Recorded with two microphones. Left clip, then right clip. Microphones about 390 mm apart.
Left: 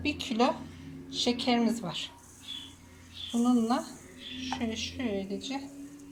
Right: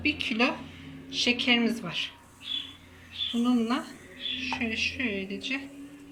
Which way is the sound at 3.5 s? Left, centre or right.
Centre.